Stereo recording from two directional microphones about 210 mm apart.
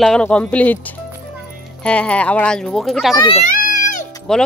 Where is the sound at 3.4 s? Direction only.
40° left (ahead or behind).